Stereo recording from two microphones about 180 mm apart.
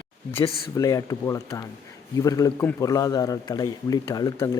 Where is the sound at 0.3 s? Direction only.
15° left (ahead or behind).